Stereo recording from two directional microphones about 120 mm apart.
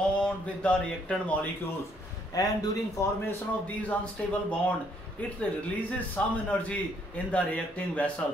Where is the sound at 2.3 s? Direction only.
30° left (ahead or behind).